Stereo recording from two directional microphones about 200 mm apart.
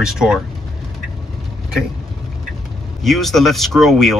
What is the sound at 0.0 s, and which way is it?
Speech, 5° right (ahead or behind).